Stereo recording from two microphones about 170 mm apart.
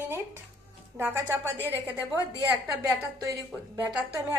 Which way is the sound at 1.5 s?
15° left (ahead or behind).